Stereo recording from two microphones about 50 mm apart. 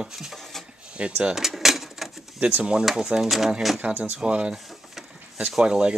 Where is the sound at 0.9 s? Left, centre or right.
Right.